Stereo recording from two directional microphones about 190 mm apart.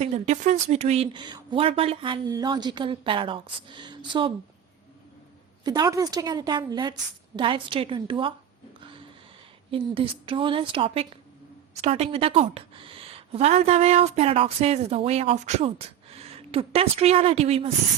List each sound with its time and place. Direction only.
0.0 s speech: 35° right (ahead or behind)
5.6 s speech: 20° right (ahead or behind)
9.7 s a woman's voice: 30° right (ahead or behind)